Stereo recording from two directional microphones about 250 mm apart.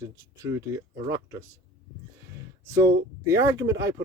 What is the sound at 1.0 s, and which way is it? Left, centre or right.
Speech, centre.